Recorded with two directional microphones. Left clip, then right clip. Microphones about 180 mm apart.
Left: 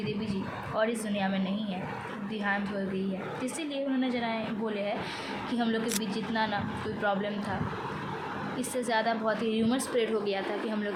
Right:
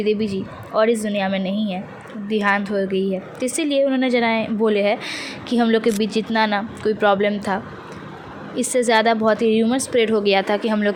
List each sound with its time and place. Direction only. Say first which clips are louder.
0.0 s speech: right 14 dB; 50° right (ahead or behind)
8.5 s speech: right 14 dB; 45° right (ahead or behind)